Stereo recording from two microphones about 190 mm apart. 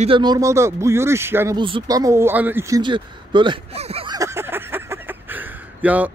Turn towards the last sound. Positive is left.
turn(degrees=-10)  # may be behind; listen again after turning